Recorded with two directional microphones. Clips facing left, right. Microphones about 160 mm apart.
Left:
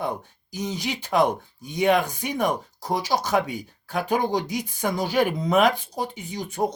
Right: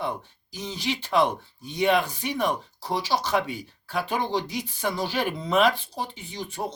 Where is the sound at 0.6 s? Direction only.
15° left (ahead or behind).